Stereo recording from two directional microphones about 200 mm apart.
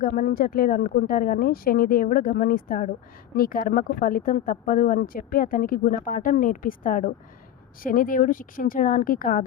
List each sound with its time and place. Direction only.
0.0 s speech: 45° left (ahead or behind)